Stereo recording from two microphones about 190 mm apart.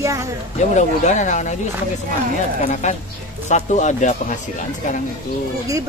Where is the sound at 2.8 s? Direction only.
40° left (ahead or behind).